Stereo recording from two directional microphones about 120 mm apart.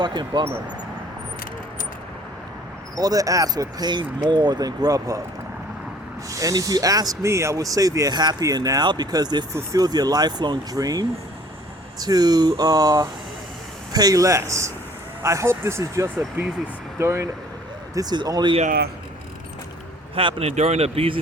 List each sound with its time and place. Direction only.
0.0 s speech: 40° right (ahead or behind)
2.9 s speech: 30° right (ahead or behind)
6.3 s speech: 30° right (ahead or behind)
17.9 s speech: 35° right (ahead or behind)
20.1 s speech: 55° right (ahead or behind)